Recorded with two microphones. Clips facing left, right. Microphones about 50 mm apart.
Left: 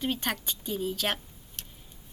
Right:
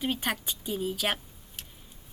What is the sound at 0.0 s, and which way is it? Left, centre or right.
A woman's voice, centre.